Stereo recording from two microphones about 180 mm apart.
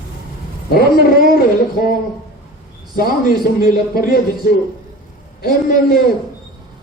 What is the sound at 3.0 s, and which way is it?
Speech, 55° left (ahead or behind).